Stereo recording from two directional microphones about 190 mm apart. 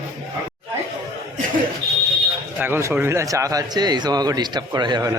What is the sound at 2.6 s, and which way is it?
Speech, 10° right (ahead or behind).